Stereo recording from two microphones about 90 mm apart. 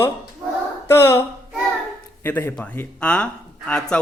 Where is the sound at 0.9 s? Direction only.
25° left (ahead or behind).